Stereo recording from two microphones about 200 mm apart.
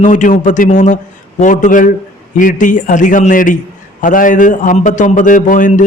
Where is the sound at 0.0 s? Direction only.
40° left (ahead or behind).